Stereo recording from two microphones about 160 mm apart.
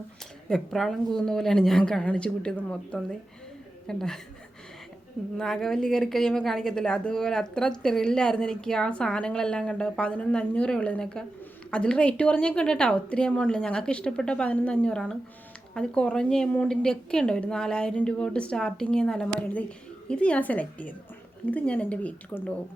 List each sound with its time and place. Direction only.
0.4 s speech: 5° left (ahead or behind)
5.4 s a woman's voice: 5° left (ahead or behind)